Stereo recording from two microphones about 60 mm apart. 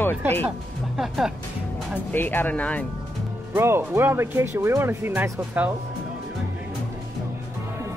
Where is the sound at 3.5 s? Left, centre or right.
Right.